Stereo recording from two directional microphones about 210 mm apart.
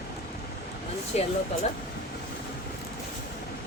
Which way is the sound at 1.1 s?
30° left (ahead or behind).